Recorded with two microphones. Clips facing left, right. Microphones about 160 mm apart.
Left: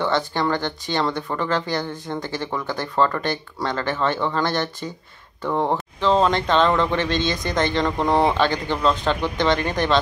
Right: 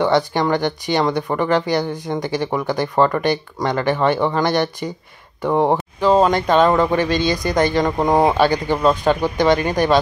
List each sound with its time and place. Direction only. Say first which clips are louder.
0.0 s speech: right 5 dB; 15° right (ahead or behind)